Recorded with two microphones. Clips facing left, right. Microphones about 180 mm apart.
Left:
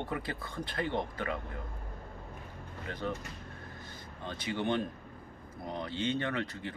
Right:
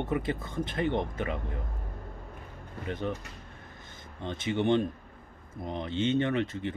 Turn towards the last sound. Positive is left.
turn(degrees=-25)  # may be behind; listen again after turning